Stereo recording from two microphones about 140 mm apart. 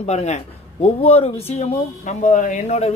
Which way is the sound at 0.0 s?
55° left (ahead or behind).